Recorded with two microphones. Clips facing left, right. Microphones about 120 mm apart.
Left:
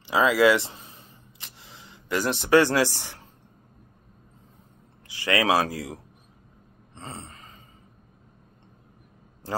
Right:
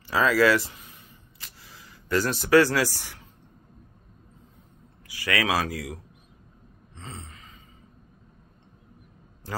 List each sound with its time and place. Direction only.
0.1 s a sound: 20° left (ahead or behind)
5.0 s speech: 25° left (ahead or behind)
7.0 s gasp: 40° left (ahead or behind)